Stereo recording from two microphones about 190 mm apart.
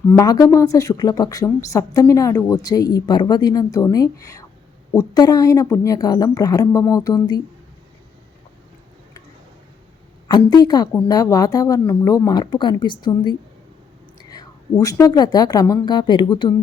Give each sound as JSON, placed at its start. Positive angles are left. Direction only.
{"t": 0.1, "sound": "speech", "side_deg": 15}
{"t": 10.2, "sound": "speech", "side_deg": 20}